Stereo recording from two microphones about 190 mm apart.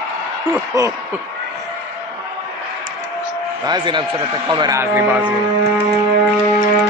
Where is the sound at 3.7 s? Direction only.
25° right (ahead or behind); by 5.8 s 10° right (ahead or behind).